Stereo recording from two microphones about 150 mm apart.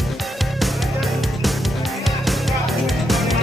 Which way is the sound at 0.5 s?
Centre (ahead or behind).